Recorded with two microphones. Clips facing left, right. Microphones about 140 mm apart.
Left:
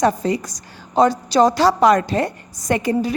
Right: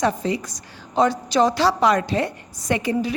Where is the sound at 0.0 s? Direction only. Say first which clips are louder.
Left 4 dB; 45° left (ahead or behind).